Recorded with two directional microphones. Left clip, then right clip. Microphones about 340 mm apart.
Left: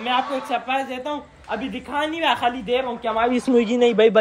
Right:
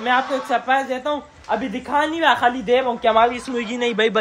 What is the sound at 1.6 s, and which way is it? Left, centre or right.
Speech, right.